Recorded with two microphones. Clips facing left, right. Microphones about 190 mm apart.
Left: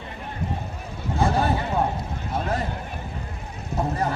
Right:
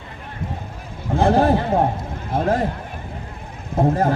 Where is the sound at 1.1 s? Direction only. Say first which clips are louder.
Right 7 dB; 60° right (ahead or behind).